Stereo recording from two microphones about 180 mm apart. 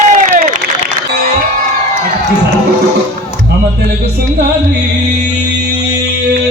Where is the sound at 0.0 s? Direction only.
45° right (ahead or behind).